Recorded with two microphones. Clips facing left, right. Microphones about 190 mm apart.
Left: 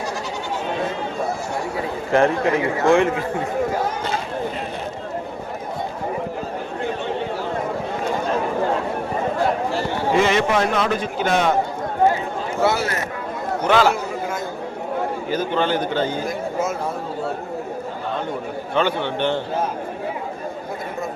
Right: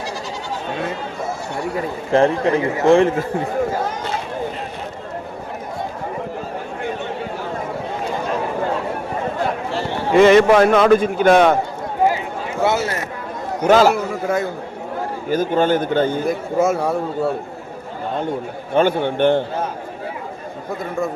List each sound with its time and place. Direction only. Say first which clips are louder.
2.1 s a man's voice: right 2 dB; 30° right (ahead or behind)
10.2 s a man's voice: right 9 dB; 55° right (ahead or behind)
12.6 s speech: right 2 dB; 15° right (ahead or behind)
13.7 s a man's voice: right 4 dB; 40° right (ahead or behind)
15.3 s a man's voice: right 6 dB; 45° right (ahead or behind); by 17.0 s 75° right (ahead or behind)
18.7 s a man's voice: right 5 dB; 45° right (ahead or behind)